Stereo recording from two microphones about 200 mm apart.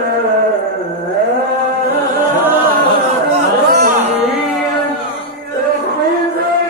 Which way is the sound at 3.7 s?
50° right (ahead or behind).